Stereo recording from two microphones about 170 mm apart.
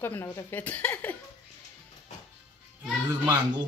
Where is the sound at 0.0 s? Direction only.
15° left (ahead or behind).